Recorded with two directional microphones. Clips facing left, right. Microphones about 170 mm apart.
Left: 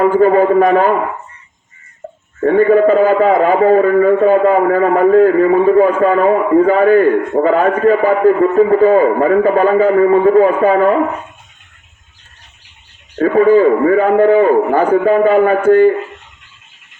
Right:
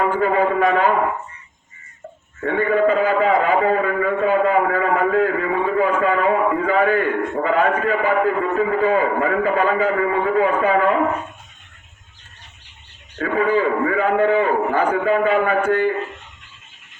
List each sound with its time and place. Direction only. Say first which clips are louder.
0.2 s a man's voice: left 9 dB; 45° left (ahead or behind)
2.4 s a man's voice: left 8 dB; 40° left (ahead or behind)
13.1 s a man's voice: left 10 dB; 40° left (ahead or behind)